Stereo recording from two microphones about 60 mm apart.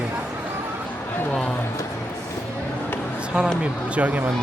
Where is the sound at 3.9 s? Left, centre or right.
Right.